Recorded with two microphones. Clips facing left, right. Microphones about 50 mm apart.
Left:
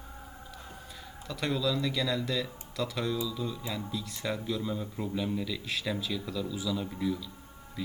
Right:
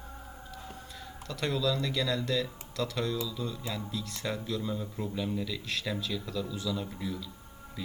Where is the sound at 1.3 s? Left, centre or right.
Centre.